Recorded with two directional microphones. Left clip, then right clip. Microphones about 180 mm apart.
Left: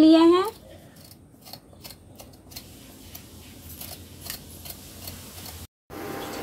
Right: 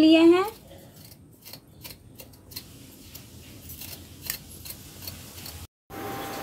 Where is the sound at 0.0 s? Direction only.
25° left (ahead or behind).